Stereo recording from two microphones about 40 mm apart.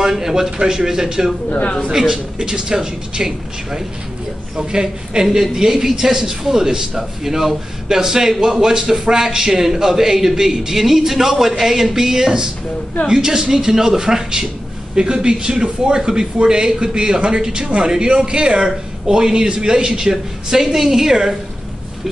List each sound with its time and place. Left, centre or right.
0.0 s a man's voice: centre
1.5 s a man's voice: left
1.9 s a man's voice: centre